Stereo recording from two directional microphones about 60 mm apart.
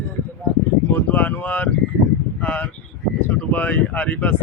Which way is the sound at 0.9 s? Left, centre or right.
Left.